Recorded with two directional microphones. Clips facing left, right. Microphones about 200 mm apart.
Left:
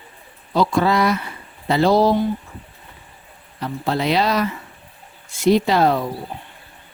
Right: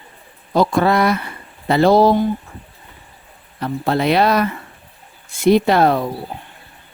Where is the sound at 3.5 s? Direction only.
55° right (ahead or behind).